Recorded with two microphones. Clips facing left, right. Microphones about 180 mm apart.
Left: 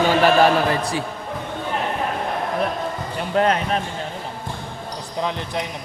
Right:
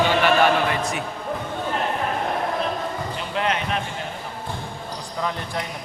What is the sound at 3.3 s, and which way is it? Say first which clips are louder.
Speech: left 6 dB; 40° left (ahead or behind).